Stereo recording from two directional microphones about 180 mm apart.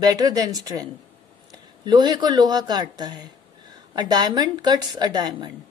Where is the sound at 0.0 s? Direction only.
20° right (ahead or behind).